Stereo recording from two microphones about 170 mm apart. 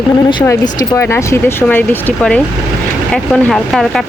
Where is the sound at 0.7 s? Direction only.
15° left (ahead or behind); by 4.1 s centre (ahead or behind).